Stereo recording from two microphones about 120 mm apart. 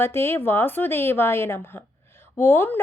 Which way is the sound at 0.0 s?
20° left (ahead or behind).